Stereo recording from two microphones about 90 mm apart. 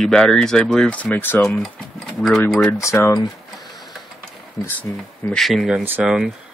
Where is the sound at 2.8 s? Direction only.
35° left (ahead or behind).